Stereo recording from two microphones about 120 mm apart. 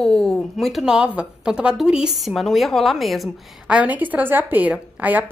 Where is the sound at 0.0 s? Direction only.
5° left (ahead or behind).